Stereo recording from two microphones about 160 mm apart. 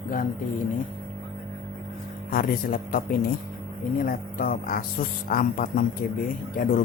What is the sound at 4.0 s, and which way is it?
A man's voice, 65° left (ahead or behind).